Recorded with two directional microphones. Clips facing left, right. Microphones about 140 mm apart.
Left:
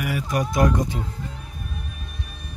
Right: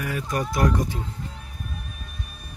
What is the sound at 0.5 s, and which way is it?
Speech, 20° left (ahead or behind).